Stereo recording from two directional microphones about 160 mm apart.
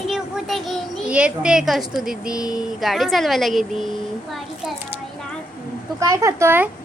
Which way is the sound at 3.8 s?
Centre (ahead or behind).